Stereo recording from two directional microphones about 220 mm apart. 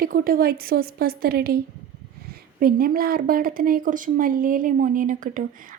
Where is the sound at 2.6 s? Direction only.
40° right (ahead or behind).